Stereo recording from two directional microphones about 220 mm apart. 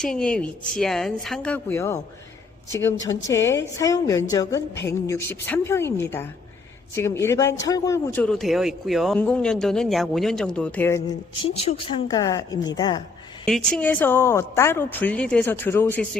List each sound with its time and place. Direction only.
0.0 s a man's voice: 5° left (ahead or behind)
4.7 s a sound: 50° left (ahead or behind)
5.0 s a woman's voice: 10° left (ahead or behind)
11.5 s a woman's voice: 30° left (ahead or behind)
13.4 s a woman's voice: 5° left (ahead or behind)